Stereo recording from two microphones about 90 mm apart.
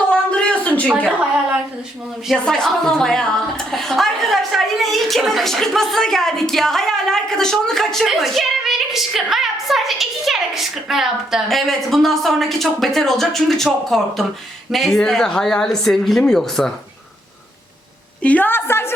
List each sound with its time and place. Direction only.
0.3 s a sound: 10° left (ahead or behind)
2.4 s a woman's voice: 5° left (ahead or behind)
18.2 s a woman's voice: 15° left (ahead or behind)